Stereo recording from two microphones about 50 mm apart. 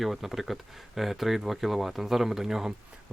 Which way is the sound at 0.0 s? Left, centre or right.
Centre.